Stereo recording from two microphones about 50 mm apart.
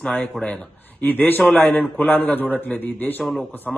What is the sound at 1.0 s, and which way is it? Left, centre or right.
A man's voice, left.